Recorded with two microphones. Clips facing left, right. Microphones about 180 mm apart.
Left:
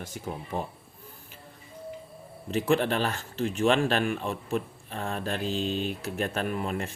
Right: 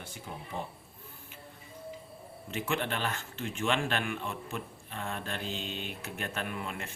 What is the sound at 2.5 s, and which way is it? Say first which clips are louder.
Speech: left 8 dB; 35° left (ahead or behind).